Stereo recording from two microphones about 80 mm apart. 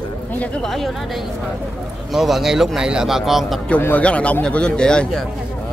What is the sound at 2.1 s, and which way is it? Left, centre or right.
A man's voice, centre.